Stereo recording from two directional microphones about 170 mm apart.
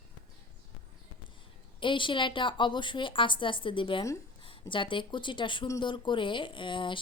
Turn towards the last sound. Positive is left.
turn(degrees=30)  # may be behind; listen again after turning